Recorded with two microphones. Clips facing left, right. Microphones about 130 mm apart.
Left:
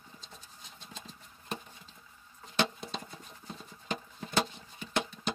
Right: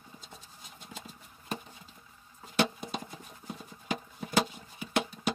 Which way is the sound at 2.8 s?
15° right (ahead or behind).